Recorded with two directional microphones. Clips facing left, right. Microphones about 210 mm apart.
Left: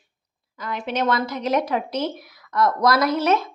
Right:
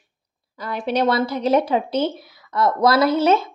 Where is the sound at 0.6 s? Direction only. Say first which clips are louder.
Right 4 dB; 35° right (ahead or behind).